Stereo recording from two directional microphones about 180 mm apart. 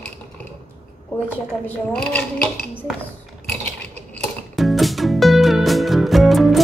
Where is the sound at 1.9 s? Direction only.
5° left (ahead or behind).